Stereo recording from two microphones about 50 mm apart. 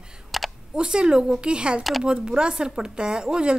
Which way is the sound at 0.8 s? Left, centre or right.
Centre.